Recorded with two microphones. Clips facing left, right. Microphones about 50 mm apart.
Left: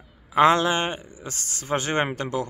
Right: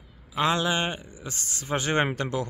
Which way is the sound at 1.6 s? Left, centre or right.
Left.